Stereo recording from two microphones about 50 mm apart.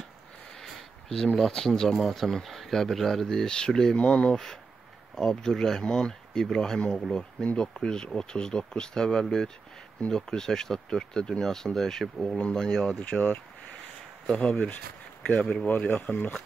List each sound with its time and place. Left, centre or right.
0.6 s speech: centre
2.0 s speech: centre; by 4.4 s left
5.1 s speech: centre
13.0 s speech: left
14.2 s speech: centre
14.5 s speech: left